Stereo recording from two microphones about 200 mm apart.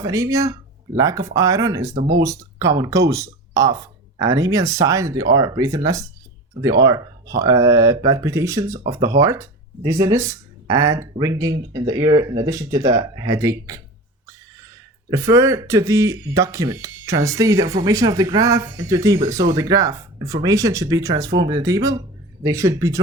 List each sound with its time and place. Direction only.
0.0 s speech: 15° right (ahead or behind)
2.0 s speech: 70° right (ahead or behind)
2.2 s speech: 15° right (ahead or behind)
15.1 s speech: 15° right (ahead or behind)